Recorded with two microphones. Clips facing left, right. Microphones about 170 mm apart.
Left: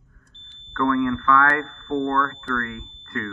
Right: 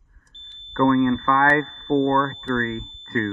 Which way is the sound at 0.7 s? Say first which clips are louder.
Right 4 dB; 35° right (ahead or behind).